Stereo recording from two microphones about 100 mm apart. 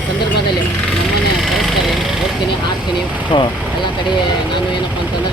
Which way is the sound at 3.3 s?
65° left (ahead or behind).